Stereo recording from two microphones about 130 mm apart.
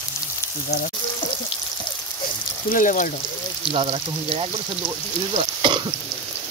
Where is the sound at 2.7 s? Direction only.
90° left.